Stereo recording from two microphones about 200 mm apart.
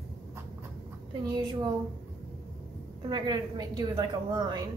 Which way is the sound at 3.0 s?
20° right (ahead or behind).